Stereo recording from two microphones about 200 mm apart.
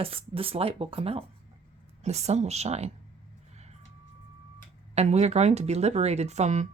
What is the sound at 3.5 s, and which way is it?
Reversing beeps, 35° right (ahead or behind).